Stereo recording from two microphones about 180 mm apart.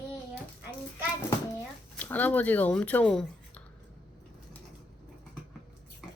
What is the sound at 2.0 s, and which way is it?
Speech, 10° left (ahead or behind).